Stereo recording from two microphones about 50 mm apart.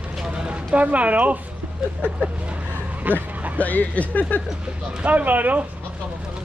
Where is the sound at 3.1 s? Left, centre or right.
Right.